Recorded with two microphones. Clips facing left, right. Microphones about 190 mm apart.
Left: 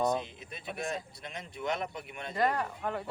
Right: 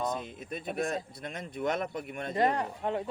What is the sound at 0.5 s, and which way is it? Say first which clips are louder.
Speech: right 5 dB; 50° right (ahead or behind).